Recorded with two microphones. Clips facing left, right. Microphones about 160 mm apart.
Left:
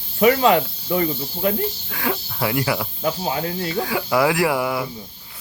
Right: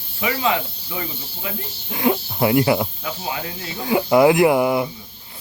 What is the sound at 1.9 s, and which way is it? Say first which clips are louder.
Speech: right 6 dB; 20° right (ahead or behind).